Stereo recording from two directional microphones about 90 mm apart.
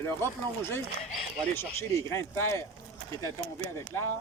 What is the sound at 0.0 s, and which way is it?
Speech, 25° left (ahead or behind).